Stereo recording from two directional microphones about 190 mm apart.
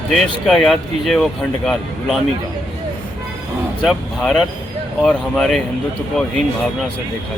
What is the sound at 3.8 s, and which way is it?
Speech, centre (ahead or behind).